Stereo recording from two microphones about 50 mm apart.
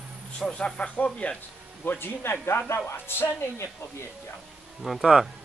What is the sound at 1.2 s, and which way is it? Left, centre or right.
Speech, left.